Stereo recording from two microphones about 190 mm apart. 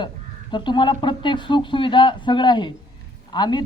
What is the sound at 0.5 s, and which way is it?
A man's voice, 25° left (ahead or behind).